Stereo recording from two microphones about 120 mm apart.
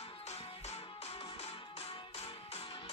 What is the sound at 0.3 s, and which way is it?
Music, 60° left (ahead or behind).